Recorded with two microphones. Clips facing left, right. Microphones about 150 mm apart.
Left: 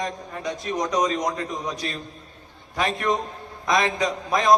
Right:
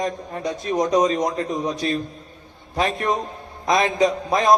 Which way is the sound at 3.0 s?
20° right (ahead or behind).